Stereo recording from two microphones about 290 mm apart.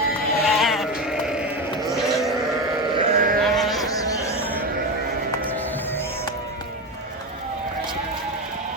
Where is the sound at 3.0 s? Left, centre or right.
Right.